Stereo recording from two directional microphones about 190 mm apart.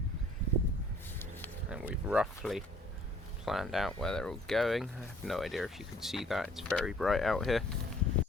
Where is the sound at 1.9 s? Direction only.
5° right (ahead or behind).